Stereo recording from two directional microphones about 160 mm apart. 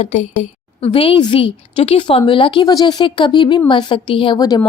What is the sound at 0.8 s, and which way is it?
A woman's voice, 35° left (ahead or behind).